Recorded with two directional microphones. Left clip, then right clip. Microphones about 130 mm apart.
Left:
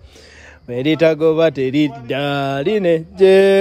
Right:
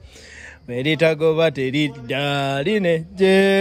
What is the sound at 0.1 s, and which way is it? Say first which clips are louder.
Speech: right 2 dB; 15° left (ahead or behind).